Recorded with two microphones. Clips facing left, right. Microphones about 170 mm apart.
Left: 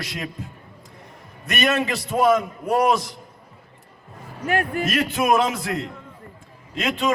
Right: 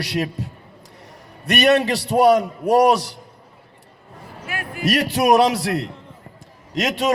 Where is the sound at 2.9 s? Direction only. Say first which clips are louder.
Right 3 dB; 70° right (ahead or behind).